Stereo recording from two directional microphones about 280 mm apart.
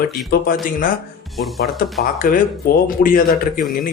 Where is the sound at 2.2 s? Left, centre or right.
Left.